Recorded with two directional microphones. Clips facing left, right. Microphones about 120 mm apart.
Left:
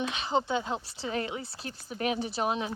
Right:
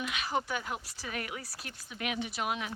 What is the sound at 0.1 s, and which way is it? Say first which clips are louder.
Speech: left 5 dB; 25° left (ahead or behind).